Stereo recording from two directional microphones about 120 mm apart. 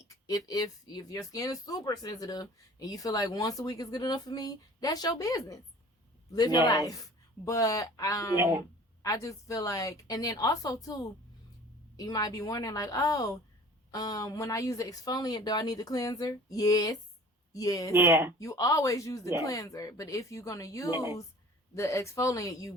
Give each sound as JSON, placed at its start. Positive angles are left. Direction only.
{"t": 0.0, "sound": "a woman's voice", "side_deg": 30}
{"t": 8.4, "sound": "speech", "side_deg": -20}
{"t": 9.0, "sound": "a woman's voice", "side_deg": 30}
{"t": 17.9, "sound": "speech", "side_deg": -20}
{"t": 18.3, "sound": "a woman's voice", "side_deg": 30}
{"t": 20.9, "sound": "speech", "side_deg": -20}
{"t": 21.8, "sound": "a woman's voice", "side_deg": 25}